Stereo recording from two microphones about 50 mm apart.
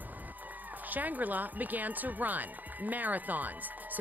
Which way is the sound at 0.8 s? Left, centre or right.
Right.